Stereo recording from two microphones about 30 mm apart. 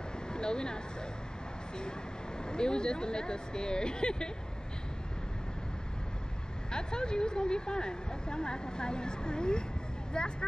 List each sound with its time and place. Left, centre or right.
0.3 s a sound: left
1.8 s speech: left
6.7 s speech: left